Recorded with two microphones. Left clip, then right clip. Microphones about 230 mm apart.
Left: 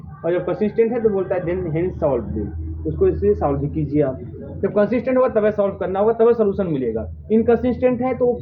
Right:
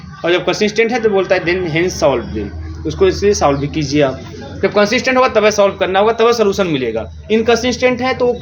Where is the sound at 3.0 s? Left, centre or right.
Right.